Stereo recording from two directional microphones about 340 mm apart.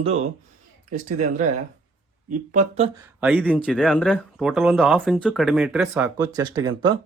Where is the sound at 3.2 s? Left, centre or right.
Centre.